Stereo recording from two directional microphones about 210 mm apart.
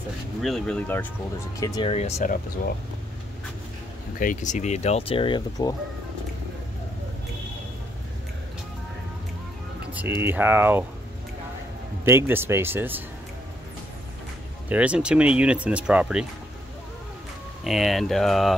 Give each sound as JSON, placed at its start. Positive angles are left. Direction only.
{"t": 0.4, "sound": "speech", "side_deg": 5}
{"t": 1.6, "sound": "speech", "side_deg": 20}
{"t": 4.2, "sound": "speech", "side_deg": 40}
{"t": 9.9, "sound": "speech", "side_deg": -10}
{"t": 12.0, "sound": "speech", "side_deg": -10}
{"t": 14.7, "sound": "speech", "side_deg": -5}
{"t": 17.6, "sound": "speech", "side_deg": 0}